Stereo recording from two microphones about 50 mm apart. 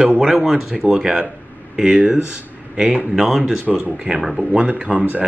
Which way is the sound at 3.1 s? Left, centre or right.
Centre.